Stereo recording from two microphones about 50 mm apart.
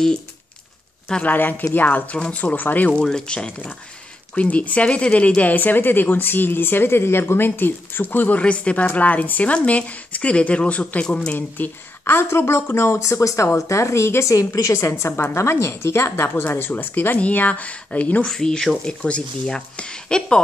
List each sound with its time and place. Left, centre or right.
1.2 s speech: left
3.0 s speech: centre
4.4 s speech: left
8.4 s speech: left
11.3 s speech: left
12.0 s a woman's voice: left
16.4 s speech: left
18.2 s speech: centre